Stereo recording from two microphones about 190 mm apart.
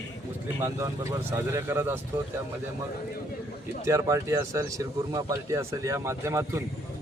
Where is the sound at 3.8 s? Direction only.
15° right (ahead or behind).